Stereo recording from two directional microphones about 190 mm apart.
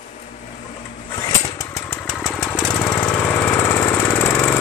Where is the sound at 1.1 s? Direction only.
20° left (ahead or behind).